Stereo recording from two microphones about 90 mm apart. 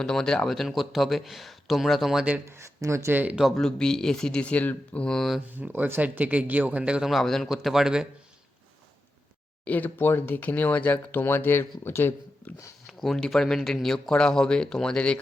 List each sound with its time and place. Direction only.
0.0 s a man's voice: 5° left (ahead or behind)
2.5 s speech: 30° right (ahead or behind)
3.3 s speech: centre (ahead or behind)
5.5 s speech: 20° right (ahead or behind)
7.1 s a man's voice: 5° left (ahead or behind)
9.6 s speech: 20° left (ahead or behind)
12.9 s speech: centre (ahead or behind)